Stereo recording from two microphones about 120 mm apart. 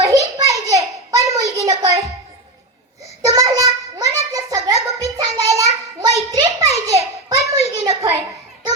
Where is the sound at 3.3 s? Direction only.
30° right (ahead or behind).